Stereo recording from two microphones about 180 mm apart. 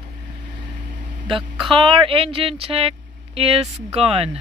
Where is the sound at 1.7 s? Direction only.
30° right (ahead or behind).